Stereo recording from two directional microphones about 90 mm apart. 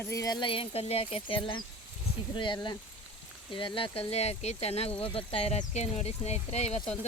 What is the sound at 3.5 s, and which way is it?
Speech, 75° left (ahead or behind).